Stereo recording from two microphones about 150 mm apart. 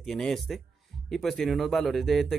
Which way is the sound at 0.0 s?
Centre (ahead or behind).